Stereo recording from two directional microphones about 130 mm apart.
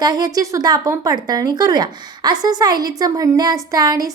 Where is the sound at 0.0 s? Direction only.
30° right (ahead or behind).